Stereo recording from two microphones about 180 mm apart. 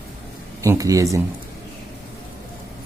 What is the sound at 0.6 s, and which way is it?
Speech, 15° right (ahead or behind).